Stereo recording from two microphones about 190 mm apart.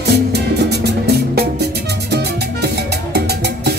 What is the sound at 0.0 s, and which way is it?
Music, 60° right (ahead or behind).